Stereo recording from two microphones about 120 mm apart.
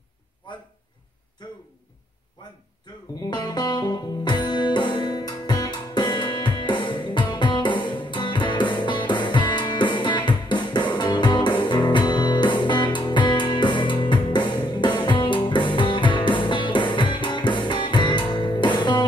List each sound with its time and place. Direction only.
3.2 s music: 35° left (ahead or behind)